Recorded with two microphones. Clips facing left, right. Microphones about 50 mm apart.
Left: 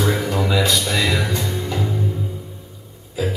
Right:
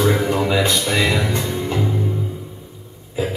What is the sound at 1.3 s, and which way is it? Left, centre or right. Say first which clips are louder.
Music: right 2 dB; right.